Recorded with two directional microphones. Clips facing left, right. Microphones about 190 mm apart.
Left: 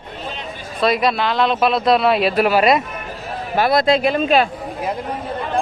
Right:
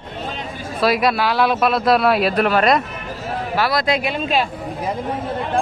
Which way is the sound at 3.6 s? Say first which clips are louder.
Left 5 dB; 25° left (ahead or behind).